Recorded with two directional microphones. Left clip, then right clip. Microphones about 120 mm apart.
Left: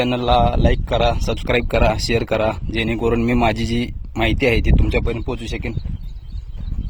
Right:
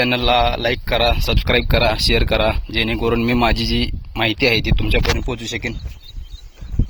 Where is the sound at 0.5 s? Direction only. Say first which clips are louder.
Right 1 dB; centre (ahead or behind).